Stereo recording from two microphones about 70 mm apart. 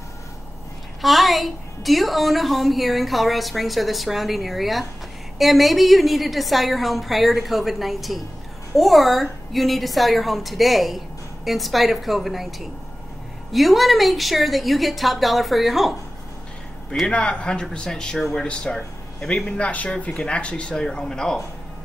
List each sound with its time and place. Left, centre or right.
1.0 s a woman's voice: centre
17.1 s speech: centre